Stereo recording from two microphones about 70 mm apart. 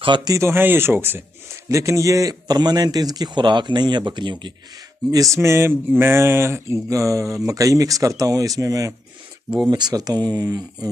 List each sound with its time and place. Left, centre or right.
0.4 s speech: right
1.7 s speech: right
5.3 s a sound: right
9.7 s speech: right